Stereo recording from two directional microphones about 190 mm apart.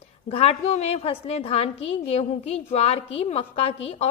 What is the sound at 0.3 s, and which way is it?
A woman's voice, 30° left (ahead or behind).